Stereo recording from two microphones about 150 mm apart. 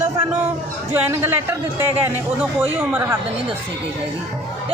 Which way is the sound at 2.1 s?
10° right (ahead or behind).